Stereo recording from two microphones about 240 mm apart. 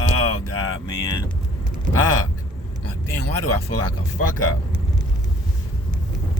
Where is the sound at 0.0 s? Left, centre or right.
Left.